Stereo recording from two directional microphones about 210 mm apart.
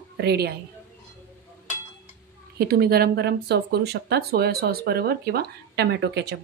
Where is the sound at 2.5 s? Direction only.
45° right (ahead or behind).